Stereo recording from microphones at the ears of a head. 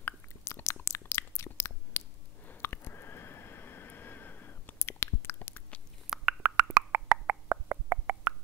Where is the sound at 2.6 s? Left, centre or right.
Left.